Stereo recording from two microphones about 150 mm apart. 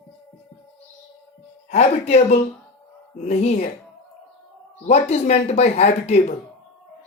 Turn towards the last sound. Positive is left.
turn(degrees=50)  # may be behind; listen again after turning